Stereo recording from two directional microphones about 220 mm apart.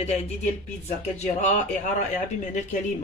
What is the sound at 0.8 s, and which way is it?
Speech, 30° left (ahead or behind).